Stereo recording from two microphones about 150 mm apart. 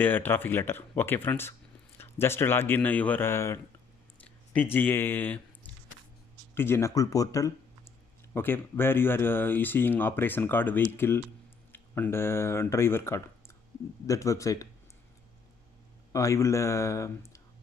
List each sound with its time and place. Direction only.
0.0 s speech: 15° left (ahead or behind)
16.1 s speech: 20° left (ahead or behind)